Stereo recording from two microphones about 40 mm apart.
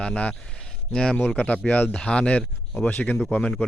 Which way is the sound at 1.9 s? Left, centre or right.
Left.